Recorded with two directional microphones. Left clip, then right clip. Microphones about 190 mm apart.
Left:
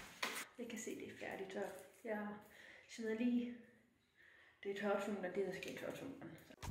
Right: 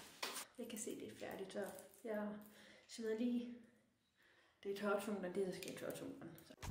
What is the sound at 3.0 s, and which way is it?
Speech, 10° right (ahead or behind).